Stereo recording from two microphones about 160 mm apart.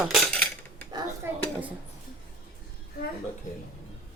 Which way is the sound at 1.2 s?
15° right (ahead or behind).